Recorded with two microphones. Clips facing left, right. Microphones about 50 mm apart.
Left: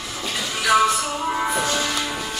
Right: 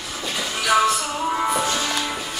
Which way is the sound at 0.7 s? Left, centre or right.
Left.